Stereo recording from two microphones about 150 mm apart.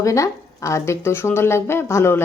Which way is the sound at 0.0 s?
20° left (ahead or behind).